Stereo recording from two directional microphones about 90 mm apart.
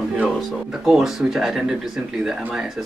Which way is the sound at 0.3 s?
Centre (ahead or behind).